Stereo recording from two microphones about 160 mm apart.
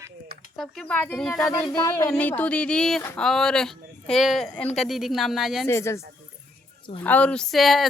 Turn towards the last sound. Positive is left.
turn(degrees=0)  # may be behind; listen again after turning